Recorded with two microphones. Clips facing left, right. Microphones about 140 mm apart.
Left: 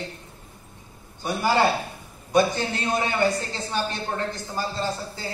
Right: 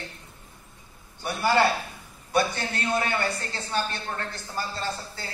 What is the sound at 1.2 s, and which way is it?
A man's voice, 20° left (ahead or behind).